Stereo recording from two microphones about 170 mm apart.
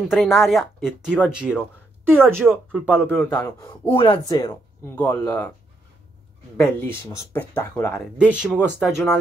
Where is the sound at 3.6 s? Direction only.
25° left (ahead or behind).